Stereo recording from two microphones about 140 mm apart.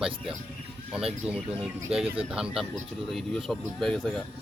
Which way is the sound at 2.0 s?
40° right (ahead or behind).